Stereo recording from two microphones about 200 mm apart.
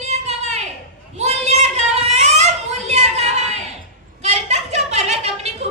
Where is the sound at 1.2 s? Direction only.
35° right (ahead or behind).